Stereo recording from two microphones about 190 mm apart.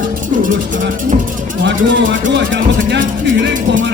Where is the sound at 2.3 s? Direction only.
70° right (ahead or behind).